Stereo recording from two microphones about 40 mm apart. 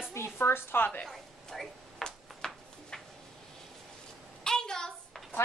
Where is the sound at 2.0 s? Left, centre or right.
Centre.